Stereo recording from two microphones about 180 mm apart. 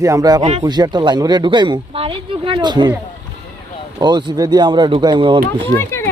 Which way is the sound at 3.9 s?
20° right (ahead or behind).